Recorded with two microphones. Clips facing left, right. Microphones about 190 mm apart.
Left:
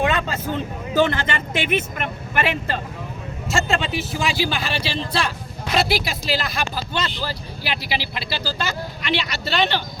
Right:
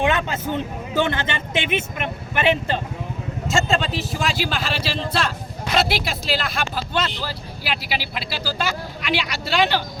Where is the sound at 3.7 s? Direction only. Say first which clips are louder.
Right 1 dB; centre (ahead or behind).